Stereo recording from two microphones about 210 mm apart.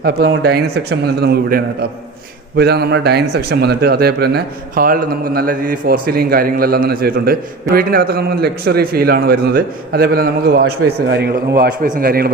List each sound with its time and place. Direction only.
0.0 s speech: 50° right (ahead or behind)